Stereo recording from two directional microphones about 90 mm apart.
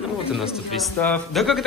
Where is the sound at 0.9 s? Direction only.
20° left (ahead or behind).